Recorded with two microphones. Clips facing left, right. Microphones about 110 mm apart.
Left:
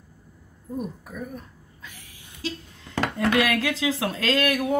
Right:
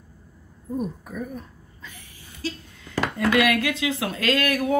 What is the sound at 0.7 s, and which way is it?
Speech, 5° left (ahead or behind).